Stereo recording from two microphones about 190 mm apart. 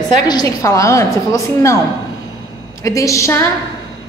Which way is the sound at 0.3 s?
20° left (ahead or behind).